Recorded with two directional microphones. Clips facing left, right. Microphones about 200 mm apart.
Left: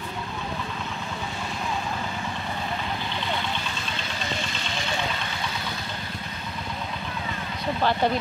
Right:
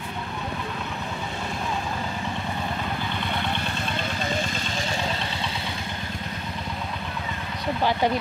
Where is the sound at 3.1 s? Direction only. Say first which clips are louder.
Right 1 dB; 55° right (ahead or behind); by 5.7 s 30° right (ahead or behind).